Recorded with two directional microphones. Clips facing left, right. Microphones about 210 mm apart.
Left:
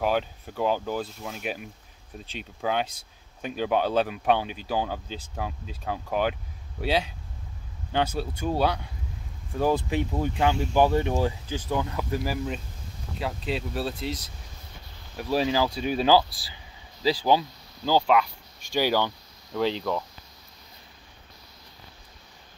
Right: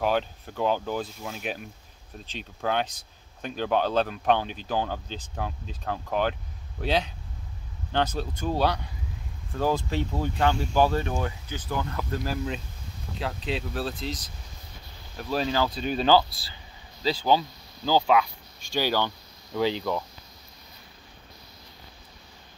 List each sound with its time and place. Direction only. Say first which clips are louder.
0.0 s speech: even; 5° left (ahead or behind)
11.1 s speech: left 5 dB; 30° left (ahead or behind)
11.8 s speech: left 2 dB; 15° left (ahead or behind)
18.7 s speech: left 2 dB; 10° left (ahead or behind)
19.5 s speech: even; 5° right (ahead or behind)